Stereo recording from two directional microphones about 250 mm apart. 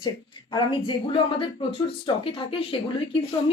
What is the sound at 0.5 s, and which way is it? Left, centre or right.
A woman's voice, centre.